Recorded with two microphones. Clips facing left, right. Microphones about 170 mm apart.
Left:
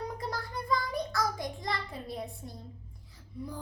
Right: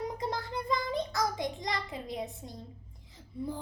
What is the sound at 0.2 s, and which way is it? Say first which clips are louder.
Child singing: right 2 dB; 20° right (ahead or behind).